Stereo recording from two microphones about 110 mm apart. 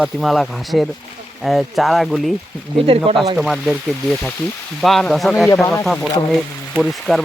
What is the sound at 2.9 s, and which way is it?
Speech, 60° right (ahead or behind).